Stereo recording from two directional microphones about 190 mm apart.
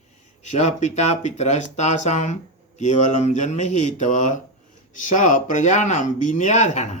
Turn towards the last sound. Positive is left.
turn(degrees=35)  # may be behind; listen again after turning